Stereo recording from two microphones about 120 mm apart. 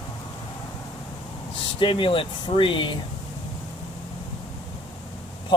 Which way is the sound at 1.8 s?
45° left (ahead or behind).